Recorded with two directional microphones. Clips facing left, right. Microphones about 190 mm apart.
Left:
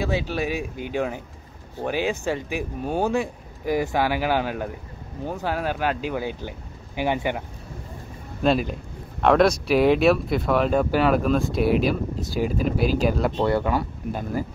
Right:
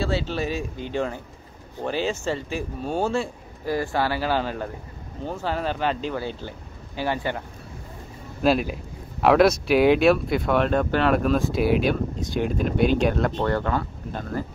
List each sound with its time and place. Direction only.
0.1 s speech: 15° left (ahead or behind)
8.4 s a man's voice: centre (ahead or behind)